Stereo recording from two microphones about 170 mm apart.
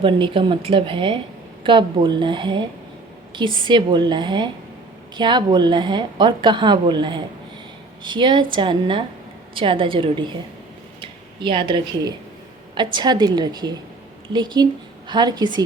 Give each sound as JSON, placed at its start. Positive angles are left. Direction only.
{"t": 0.0, "sound": "a woman's voice", "side_deg": -30}